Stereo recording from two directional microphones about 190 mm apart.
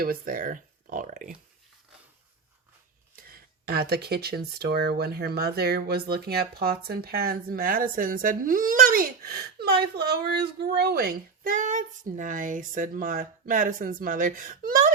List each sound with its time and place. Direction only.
0.0 s a woman's voice: 50° right (ahead or behind)
3.7 s speech: 55° right (ahead or behind)
11.4 s a woman's voice: 45° right (ahead or behind)